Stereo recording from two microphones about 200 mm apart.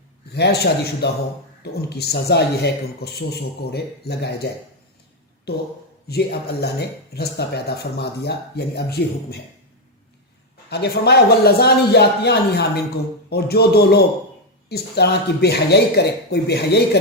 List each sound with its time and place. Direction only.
0.3 s speech: 55° left (ahead or behind)
5.5 s speech: 55° left (ahead or behind)
10.7 s speech: 55° left (ahead or behind)